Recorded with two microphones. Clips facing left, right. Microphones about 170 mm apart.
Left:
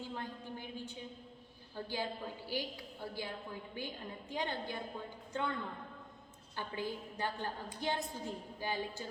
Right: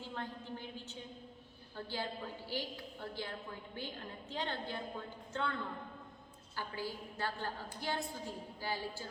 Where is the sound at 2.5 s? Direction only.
10° left (ahead or behind).